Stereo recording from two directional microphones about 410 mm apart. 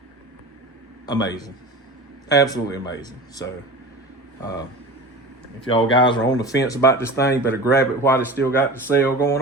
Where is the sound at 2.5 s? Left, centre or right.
Centre.